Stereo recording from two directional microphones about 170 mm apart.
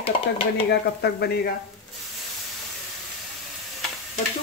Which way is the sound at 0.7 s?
70° left (ahead or behind).